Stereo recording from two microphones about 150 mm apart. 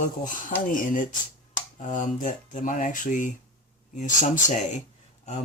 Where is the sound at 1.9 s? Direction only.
60° left (ahead or behind).